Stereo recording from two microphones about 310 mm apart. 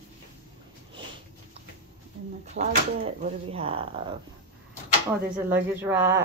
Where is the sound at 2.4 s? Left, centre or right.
Right.